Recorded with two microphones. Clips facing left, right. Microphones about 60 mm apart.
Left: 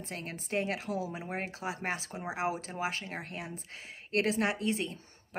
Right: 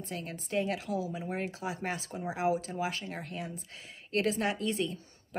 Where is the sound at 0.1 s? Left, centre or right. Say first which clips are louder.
Right 1 dB; left.